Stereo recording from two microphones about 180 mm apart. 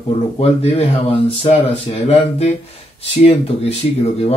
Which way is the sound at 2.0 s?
35° left (ahead or behind).